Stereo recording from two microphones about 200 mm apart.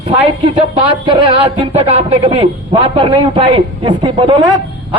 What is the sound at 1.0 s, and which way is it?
A man's voice, 25° right (ahead or behind).